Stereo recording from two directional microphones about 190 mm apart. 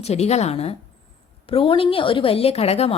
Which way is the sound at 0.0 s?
35° left (ahead or behind).